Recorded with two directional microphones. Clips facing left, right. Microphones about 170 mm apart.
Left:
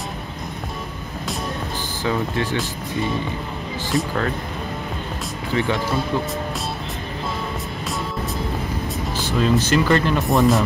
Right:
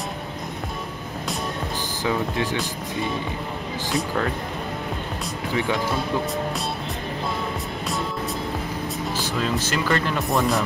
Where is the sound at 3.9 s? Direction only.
5° right (ahead or behind).